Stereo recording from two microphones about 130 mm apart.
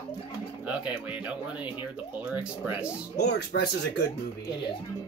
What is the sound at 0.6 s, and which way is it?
Speech, 10° right (ahead or behind).